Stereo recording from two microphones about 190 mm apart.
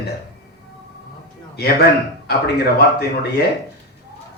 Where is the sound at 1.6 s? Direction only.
55° left (ahead or behind).